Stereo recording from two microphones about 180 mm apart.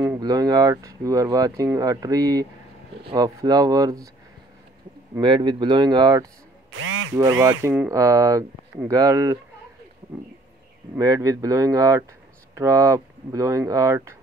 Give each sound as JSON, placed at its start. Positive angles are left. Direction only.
{"t": 0.0, "sound": "speech", "side_deg": -20}
{"t": 5.1, "sound": "speech", "side_deg": -25}
{"t": 6.7, "sound": "speech", "side_deg": -90}
{"t": 7.2, "sound": "speech", "side_deg": -20}
{"t": 11.0, "sound": "speech", "side_deg": -20}